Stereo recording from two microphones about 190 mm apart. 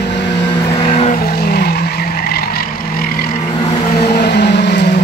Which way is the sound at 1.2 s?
55° left (ahead or behind).